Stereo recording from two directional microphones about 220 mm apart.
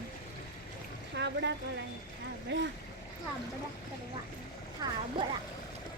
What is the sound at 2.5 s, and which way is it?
Speech, 55° right (ahead or behind).